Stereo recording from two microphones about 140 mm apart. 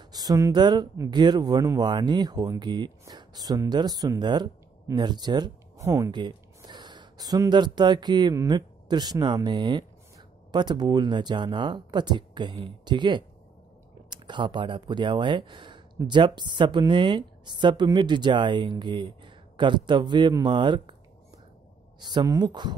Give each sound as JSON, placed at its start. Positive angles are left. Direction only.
{"t": 0.0, "sound": "speech", "side_deg": -25}
{"t": 6.1, "sound": "speech", "side_deg": -30}
{"t": 22.0, "sound": "speech", "side_deg": -30}